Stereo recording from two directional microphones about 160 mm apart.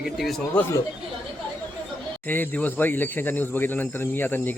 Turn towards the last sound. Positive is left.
turn(degrees=15)  # may be behind; listen again after turning